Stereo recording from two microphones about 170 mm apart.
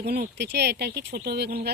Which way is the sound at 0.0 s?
70° right (ahead or behind).